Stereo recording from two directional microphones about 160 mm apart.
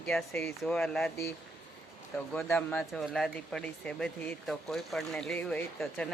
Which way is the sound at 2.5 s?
5° left (ahead or behind).